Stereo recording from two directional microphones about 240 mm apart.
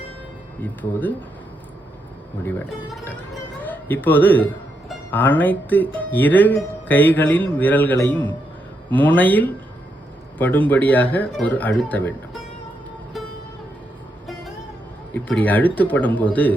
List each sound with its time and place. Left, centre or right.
0.6 s speech: centre
2.9 s a man's voice: centre
13.2 s music: centre
15.1 s speech: centre